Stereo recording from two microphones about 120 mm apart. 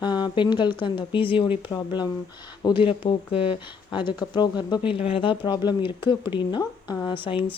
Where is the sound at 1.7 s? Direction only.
35° left (ahead or behind).